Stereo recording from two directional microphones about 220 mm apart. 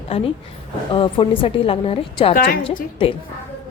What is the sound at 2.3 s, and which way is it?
Speech, 40° left (ahead or behind).